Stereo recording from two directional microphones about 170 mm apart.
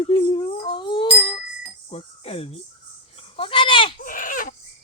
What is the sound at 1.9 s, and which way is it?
Speech, 35° left (ahead or behind).